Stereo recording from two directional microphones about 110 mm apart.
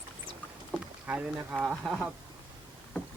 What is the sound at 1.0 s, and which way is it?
Speech, 10° right (ahead or behind).